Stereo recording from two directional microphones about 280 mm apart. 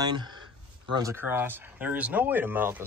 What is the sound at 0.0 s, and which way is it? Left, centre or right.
Speech, centre.